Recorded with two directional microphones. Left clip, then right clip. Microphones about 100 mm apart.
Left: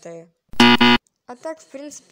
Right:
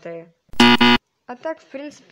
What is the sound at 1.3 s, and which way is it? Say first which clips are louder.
Speech: right 3 dB; 40° left (ahead or behind).